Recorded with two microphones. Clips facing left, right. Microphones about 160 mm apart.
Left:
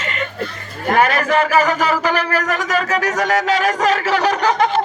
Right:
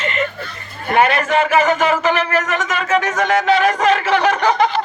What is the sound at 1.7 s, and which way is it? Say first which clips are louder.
Speech: right 2 dB; 35° left (ahead or behind).